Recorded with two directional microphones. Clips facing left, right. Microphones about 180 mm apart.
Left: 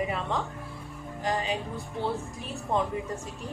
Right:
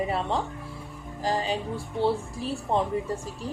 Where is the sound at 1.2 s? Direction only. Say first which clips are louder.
Right 2 dB; 35° right (ahead or behind).